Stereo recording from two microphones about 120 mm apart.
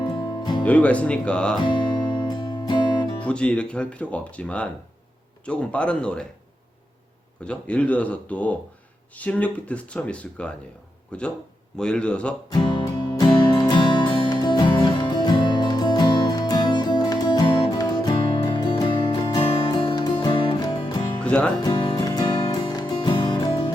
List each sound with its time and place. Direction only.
0.0 s music: 35° left (ahead or behind)
0.6 s speech: 10° left (ahead or behind)
1.6 s music: 40° left (ahead or behind)
3.2 s speech: 10° left (ahead or behind)
7.4 s speech: 10° left (ahead or behind)
12.5 s music: 40° left (ahead or behind)
21.2 s music: 10° left (ahead or behind)
21.6 s music: 40° left (ahead or behind)